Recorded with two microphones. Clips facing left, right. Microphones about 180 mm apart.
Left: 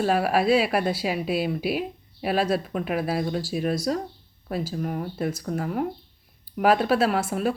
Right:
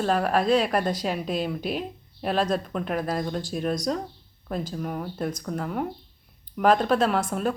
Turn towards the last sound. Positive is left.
turn(degrees=5)  # may be behind; listen again after turning